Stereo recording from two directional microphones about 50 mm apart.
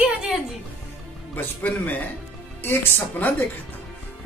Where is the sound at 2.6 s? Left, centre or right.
Left.